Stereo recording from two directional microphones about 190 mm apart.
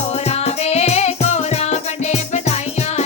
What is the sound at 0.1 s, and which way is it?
Music, 35° left (ahead or behind).